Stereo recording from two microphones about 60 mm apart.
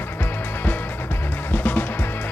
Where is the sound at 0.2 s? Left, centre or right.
Left.